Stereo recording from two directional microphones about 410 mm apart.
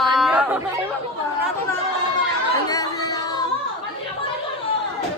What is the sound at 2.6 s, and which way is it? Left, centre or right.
Singing, centre.